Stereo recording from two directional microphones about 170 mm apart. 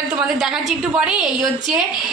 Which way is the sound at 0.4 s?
5° right (ahead or behind).